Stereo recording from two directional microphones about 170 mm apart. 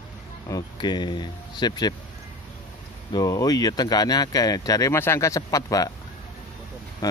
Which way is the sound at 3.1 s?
20° left (ahead or behind).